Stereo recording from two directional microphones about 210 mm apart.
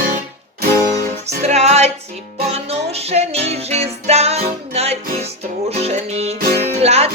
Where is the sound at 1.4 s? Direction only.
30° right (ahead or behind).